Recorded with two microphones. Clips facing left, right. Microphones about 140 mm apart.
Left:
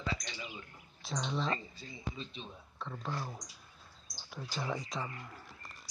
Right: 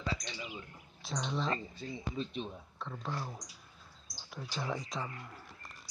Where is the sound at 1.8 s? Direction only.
55° right (ahead or behind).